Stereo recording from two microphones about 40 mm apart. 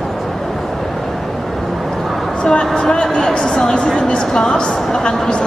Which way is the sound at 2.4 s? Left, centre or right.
Left.